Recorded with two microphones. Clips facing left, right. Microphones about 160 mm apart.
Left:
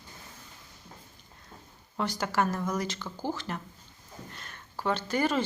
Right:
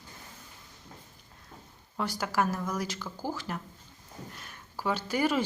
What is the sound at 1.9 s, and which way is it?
Speech, 5° right (ahead or behind).